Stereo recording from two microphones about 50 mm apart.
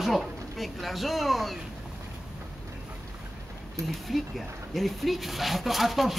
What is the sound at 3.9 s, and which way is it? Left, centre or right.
A man's voice, centre.